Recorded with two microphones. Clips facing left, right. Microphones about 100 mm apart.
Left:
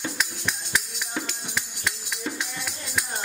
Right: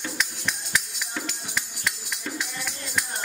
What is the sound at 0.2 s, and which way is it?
Music, centre (ahead or behind).